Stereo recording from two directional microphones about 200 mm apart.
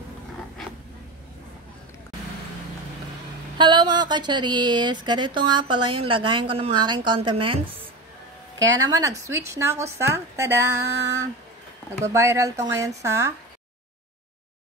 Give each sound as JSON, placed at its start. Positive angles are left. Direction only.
{"t": 3.5, "sound": "speech", "side_deg": -20}
{"t": 8.7, "sound": "speech", "side_deg": -15}
{"t": 12.0, "sound": "speech", "side_deg": -15}